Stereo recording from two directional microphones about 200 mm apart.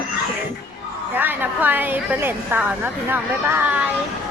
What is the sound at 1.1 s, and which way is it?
A woman's voice, 10° right (ahead or behind).